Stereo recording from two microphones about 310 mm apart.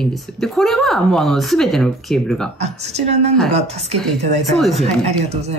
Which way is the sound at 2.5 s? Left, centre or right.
Right.